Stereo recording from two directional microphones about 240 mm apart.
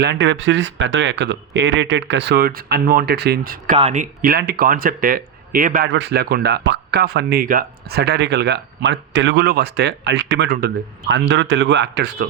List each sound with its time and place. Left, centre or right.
0.0 s speech: right